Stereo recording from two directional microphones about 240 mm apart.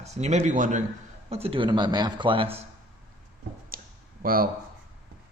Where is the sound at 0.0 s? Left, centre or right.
Right.